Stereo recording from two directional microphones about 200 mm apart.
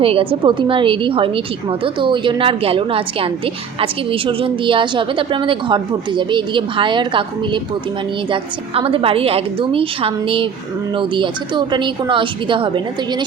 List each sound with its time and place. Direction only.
0.0 s a woman's voice: 30° right (ahead or behind)